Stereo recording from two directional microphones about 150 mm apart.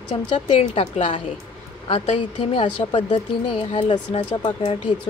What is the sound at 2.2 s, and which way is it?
Speech, 35° left (ahead or behind).